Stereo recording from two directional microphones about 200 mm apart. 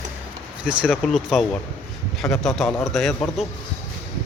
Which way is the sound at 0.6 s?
5° right (ahead or behind).